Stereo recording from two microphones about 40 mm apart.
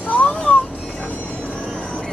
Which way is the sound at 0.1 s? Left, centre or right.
Left.